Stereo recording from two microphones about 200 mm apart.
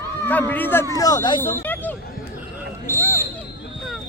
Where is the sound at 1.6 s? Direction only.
10° left (ahead or behind).